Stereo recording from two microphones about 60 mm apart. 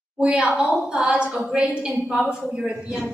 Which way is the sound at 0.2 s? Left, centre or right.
Centre.